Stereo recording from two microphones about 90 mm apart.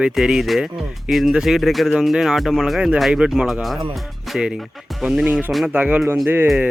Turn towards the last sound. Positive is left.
turn(degrees=-20)  # may be behind; listen again after turning